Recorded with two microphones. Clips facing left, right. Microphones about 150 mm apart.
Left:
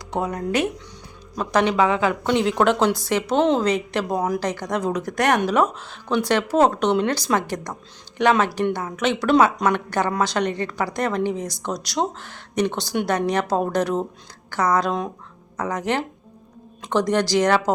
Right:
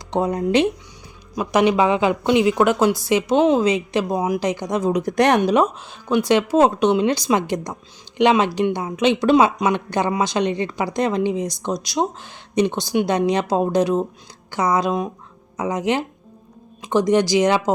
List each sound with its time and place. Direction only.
0.2 s a woman's voice: 25° right (ahead or behind)